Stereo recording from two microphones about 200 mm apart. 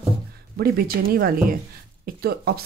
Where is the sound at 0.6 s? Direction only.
50° right (ahead or behind).